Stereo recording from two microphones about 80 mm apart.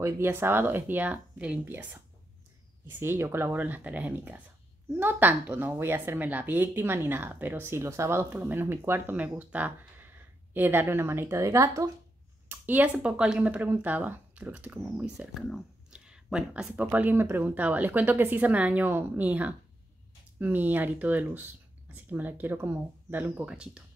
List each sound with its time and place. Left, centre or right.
0.0 s speech: right
2.9 s speech: right
12.4 s speech: right
15.9 s a sound: centre
16.7 s speech: right
23.5 s speech: centre